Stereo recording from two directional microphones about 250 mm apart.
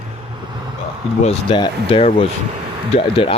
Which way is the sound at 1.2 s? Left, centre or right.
Left.